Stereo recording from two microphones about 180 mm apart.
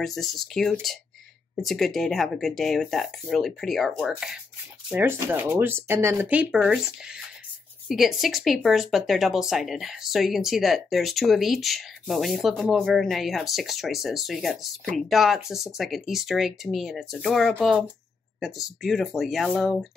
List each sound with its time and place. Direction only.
0.0 s speech: centre (ahead or behind)